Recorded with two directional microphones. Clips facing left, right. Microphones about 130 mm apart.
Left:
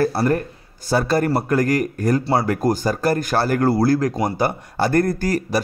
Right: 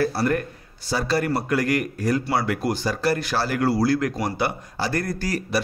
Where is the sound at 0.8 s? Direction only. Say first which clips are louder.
Left 5 dB; 50° left (ahead or behind).